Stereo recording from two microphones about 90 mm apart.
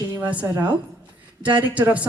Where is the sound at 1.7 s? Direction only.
15° right (ahead or behind).